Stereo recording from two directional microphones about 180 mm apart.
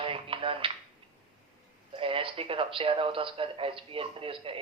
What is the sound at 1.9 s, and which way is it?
A man's voice, 30° right (ahead or behind).